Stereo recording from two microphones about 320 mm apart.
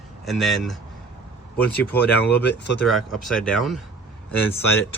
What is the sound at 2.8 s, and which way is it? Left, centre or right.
Speech, centre.